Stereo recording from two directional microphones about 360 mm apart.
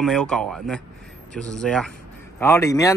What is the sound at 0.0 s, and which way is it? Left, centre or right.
A man's voice, centre.